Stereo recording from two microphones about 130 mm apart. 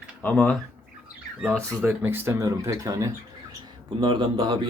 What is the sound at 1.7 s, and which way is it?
Speech, 15° right (ahead or behind).